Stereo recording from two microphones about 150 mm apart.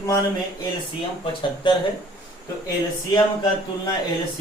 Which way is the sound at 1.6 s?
35° left (ahead or behind).